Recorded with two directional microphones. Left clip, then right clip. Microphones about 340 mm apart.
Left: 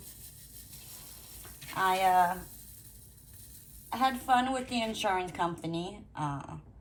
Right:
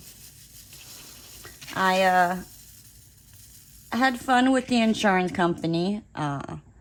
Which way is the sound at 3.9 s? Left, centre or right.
Right.